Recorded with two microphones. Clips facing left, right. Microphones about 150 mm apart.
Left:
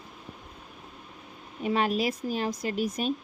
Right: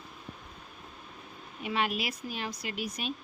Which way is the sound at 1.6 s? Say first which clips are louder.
Left 6 dB; 40° left (ahead or behind).